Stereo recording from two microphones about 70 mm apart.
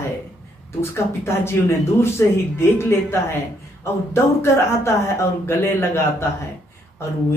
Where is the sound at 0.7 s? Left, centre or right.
Left.